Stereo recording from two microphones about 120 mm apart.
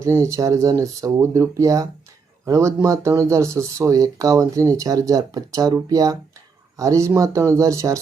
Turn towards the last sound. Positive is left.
turn(degrees=-25)  # may be behind; listen again after turning